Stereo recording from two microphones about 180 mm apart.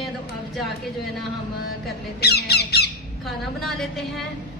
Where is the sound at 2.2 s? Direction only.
65° left (ahead or behind).